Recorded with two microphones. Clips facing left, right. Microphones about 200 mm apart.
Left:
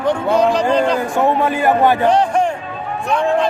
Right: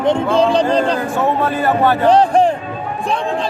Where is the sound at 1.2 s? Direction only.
15° left (ahead or behind).